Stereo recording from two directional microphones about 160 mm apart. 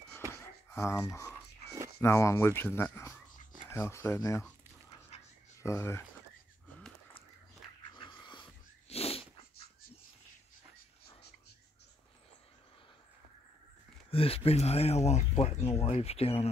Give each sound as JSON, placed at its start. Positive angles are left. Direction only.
{"t": 0.7, "sound": "a sound", "side_deg": 20}
{"t": 2.0, "sound": "speech", "side_deg": 15}
{"t": 5.6, "sound": "speech", "side_deg": 15}
{"t": 8.2, "sound": "wheeze", "side_deg": 30}
{"t": 14.1, "sound": "speech", "side_deg": 35}